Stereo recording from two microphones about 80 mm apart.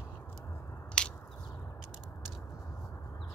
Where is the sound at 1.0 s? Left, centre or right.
Centre.